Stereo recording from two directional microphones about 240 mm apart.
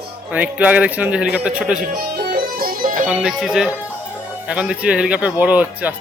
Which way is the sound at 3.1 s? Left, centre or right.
Centre.